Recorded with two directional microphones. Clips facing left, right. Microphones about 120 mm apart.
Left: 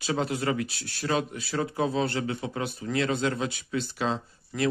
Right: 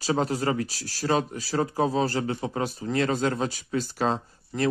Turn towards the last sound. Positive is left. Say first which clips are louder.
# right 1 dB
turn(degrees=-30)  # may be behind; listen again after turning